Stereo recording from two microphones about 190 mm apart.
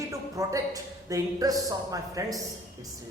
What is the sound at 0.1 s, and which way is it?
A woman's voice, 15° right (ahead or behind).